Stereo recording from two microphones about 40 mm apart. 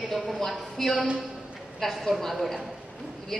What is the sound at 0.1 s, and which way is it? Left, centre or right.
A woman's voice, centre.